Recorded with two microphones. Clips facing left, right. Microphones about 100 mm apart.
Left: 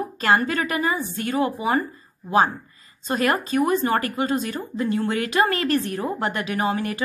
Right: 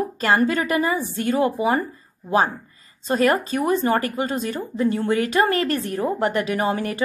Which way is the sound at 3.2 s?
40° left (ahead or behind).